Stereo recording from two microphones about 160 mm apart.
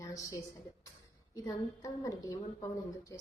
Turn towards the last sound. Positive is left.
turn(degrees=20)  # may be behind; listen again after turning